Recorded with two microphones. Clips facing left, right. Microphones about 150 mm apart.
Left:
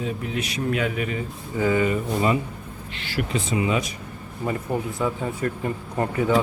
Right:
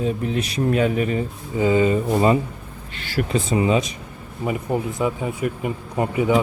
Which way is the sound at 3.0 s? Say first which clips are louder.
Right 4 dB; 40° right (ahead or behind).